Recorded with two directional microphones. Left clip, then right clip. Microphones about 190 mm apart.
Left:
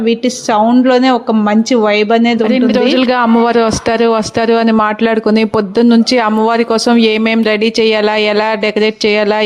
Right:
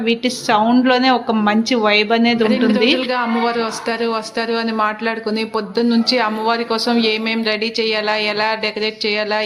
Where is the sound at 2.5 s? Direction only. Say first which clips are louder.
Left 4 dB; 55° left (ahead or behind).